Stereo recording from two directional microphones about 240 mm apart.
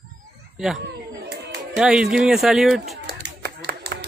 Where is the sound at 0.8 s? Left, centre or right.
Right.